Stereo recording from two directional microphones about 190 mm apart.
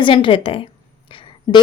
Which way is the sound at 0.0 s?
25° left (ahead or behind).